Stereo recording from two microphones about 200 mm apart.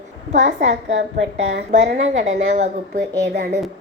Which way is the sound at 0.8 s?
65° right (ahead or behind).